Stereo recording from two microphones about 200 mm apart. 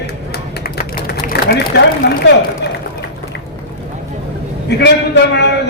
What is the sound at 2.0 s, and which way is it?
Speech, 55° left (ahead or behind).